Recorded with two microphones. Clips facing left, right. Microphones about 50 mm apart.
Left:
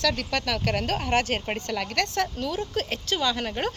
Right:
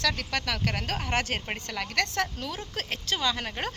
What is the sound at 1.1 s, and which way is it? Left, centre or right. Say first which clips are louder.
Speech: left 4 dB; centre.